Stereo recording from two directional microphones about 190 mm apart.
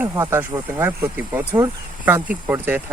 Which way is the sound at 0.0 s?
15° right (ahead or behind).